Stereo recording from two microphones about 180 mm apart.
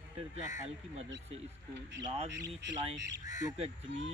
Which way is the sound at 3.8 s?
90° right.